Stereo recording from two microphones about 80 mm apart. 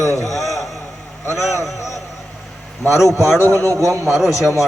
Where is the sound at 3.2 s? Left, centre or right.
Left.